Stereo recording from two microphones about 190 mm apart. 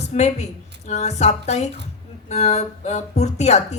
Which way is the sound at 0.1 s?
35° left (ahead or behind).